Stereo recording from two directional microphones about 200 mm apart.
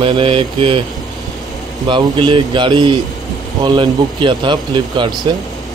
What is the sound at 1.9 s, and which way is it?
Mantra, 25° right (ahead or behind).